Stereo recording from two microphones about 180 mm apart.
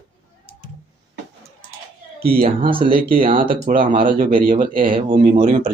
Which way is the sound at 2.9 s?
55° right (ahead or behind).